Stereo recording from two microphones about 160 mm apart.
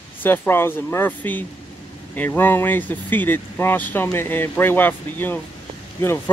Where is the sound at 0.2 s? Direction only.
15° left (ahead or behind).